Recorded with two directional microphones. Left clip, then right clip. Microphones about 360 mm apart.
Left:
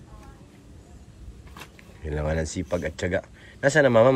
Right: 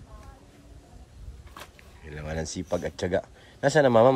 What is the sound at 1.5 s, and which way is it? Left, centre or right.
Speech, centre.